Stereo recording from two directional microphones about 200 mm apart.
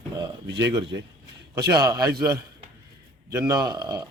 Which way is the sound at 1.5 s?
20° right (ahead or behind).